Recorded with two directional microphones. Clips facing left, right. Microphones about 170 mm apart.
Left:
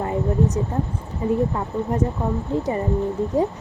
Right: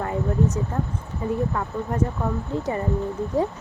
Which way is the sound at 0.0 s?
20° left (ahead or behind).